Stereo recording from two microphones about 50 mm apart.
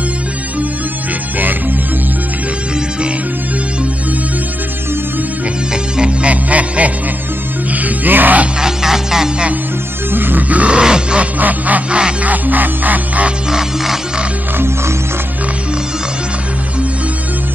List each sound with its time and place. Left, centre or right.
5.9 s music: right
8.5 s music: centre
10.1 s music: right
10.5 s music: right
10.8 s grunt: centre
11.3 s music: right
13.5 s music: centre